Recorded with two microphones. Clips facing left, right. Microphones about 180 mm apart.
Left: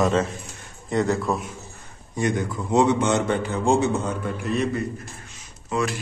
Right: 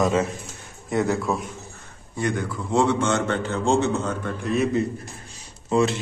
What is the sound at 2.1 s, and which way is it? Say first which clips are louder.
A man's voice: left 2 dB; 20° left (ahead or behind).